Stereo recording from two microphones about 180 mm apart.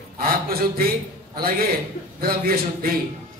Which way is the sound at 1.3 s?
55° right (ahead or behind).